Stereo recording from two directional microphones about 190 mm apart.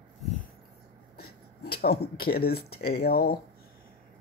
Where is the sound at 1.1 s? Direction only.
55° left (ahead or behind).